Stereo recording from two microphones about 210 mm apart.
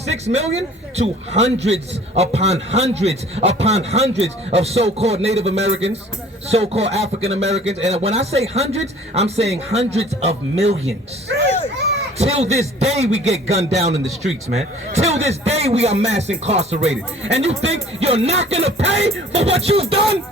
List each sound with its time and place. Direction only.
0.1 s a man's voice: 30° right (ahead or behind)
11.4 s a sound: 30° left (ahead or behind)
12.1 s a man's voice: 30° right (ahead or behind)